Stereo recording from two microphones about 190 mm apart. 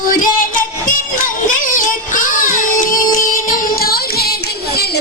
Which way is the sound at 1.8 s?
45° left (ahead or behind).